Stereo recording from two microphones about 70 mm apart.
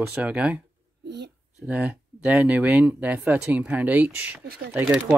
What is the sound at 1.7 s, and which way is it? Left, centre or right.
Speech, centre.